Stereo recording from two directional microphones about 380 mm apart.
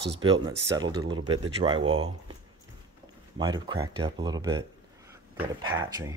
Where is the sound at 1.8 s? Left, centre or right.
Right.